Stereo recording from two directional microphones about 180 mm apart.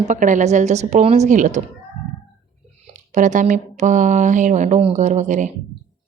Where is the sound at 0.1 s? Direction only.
45° right (ahead or behind).